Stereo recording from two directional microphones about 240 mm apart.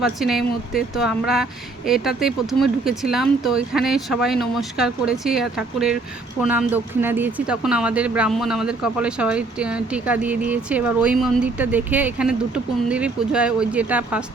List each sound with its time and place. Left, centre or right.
0.0 s speech: centre